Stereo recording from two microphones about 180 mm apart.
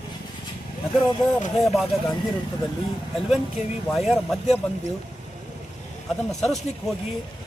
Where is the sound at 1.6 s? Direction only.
Centre (ahead or behind).